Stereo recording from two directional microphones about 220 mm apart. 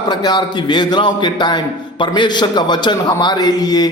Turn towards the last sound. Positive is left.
turn(degrees=20)  # may be behind; listen again after turning